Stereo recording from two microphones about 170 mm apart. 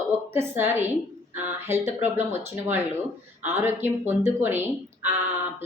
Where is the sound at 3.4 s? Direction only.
15° right (ahead or behind).